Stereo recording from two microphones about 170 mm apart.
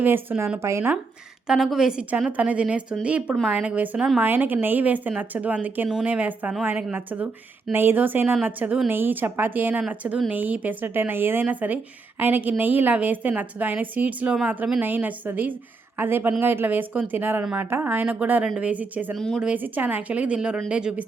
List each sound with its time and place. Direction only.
0.0 s a woman's voice: 10° right (ahead or behind)
1.5 s a woman's voice: centre (ahead or behind)
19.1 s speech: centre (ahead or behind)
19.5 s a woman's voice: 10° right (ahead or behind)